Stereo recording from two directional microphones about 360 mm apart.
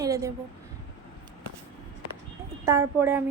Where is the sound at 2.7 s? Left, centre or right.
Centre.